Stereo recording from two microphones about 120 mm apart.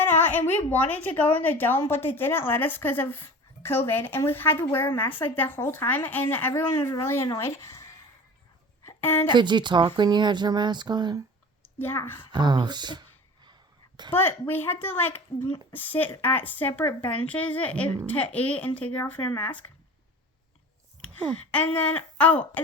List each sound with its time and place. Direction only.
0.0 s a sound: 20° left (ahead or behind)
0.7 s a woman's voice: 15° left (ahead or behind)
8.9 s a sound: 15° left (ahead or behind)
9.3 s speech: 40° right (ahead or behind)
11.8 s speech: 20° left (ahead or behind)
12.3 s speech: 40° right (ahead or behind)
14.1 s a woman's voice: 20° left (ahead or behind)
21.2 s a woman's voice: 10° left (ahead or behind)